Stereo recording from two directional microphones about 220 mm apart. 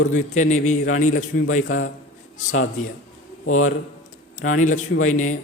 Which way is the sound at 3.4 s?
75° left (ahead or behind).